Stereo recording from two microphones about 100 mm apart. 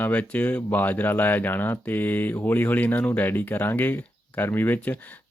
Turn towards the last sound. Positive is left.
turn(degrees=20)  # may be behind; listen again after turning